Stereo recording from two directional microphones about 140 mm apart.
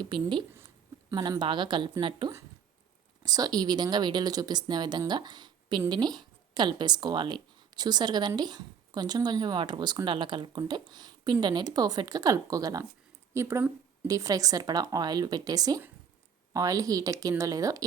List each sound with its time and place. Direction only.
0.0 s a woman's voice: 35° right (ahead or behind)